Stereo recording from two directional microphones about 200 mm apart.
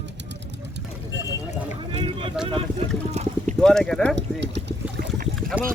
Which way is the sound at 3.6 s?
5° left (ahead or behind).